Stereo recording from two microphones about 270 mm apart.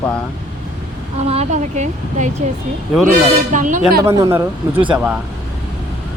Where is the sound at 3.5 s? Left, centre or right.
Right.